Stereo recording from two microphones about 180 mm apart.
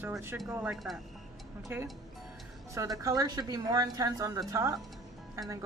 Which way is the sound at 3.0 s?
20° right (ahead or behind).